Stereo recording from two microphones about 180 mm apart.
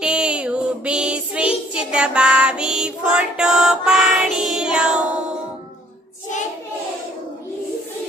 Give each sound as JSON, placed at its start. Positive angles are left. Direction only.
{"t": 0.0, "sound": "child singing", "side_deg": -5}